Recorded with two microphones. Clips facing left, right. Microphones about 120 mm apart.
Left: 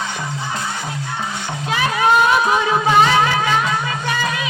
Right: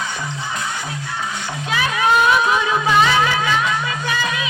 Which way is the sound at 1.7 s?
35° left (ahead or behind).